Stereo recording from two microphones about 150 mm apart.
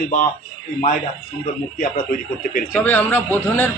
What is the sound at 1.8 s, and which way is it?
Speech, 60° left (ahead or behind).